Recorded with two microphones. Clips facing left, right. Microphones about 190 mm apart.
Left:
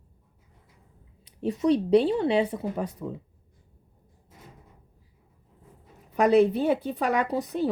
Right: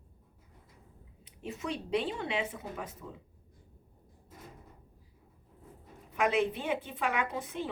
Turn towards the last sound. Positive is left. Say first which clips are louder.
# left 8 dB
turn(degrees=40)  # may be behind; listen again after turning